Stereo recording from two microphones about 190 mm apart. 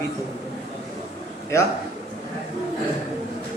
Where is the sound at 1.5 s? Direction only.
15° left (ahead or behind).